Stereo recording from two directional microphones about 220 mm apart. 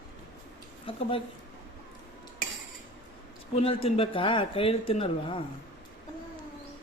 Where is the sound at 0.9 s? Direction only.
25° left (ahead or behind).